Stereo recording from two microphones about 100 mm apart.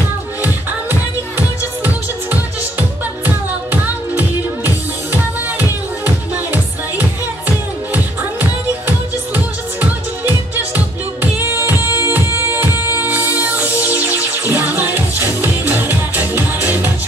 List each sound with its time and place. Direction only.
3.7 s music: 20° right (ahead or behind)
6.0 s music: 15° right (ahead or behind)